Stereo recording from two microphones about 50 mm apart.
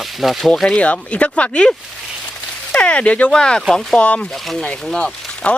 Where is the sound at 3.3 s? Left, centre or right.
Centre.